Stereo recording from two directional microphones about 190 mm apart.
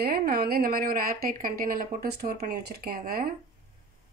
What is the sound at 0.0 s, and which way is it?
A woman's voice, 50° right (ahead or behind).